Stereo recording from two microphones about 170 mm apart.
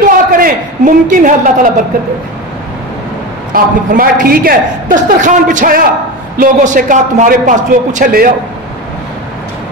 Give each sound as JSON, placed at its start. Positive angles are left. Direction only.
{"t": 0.3, "sound": "a man's voice", "side_deg": -55}
{"t": 3.5, "sound": "a man's voice", "side_deg": -55}